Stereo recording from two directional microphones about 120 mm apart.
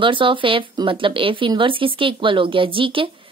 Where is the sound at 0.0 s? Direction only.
45° right (ahead or behind).